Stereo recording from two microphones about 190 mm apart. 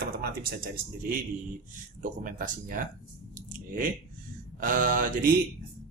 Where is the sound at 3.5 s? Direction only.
45° right (ahead or behind).